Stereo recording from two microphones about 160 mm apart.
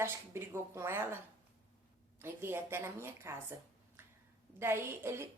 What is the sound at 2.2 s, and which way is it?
Speech, 15° right (ahead or behind).